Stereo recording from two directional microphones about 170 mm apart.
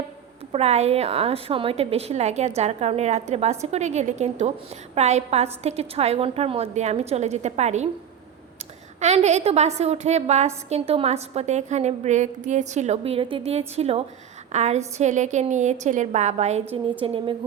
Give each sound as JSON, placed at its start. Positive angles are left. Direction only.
{"t": 0.5, "sound": "a woman's voice", "side_deg": -40}
{"t": 9.0, "sound": "a woman's voice", "side_deg": -40}
{"t": 17.0, "sound": "a woman's voice", "side_deg": -30}